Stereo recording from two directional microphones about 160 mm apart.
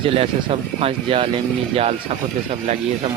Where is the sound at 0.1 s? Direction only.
35° right (ahead or behind).